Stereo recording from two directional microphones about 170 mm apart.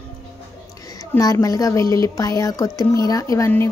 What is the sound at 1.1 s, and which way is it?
A woman's voice, 20° left (ahead or behind).